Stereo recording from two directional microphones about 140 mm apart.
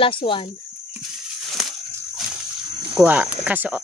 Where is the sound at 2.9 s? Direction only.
10° right (ahead or behind).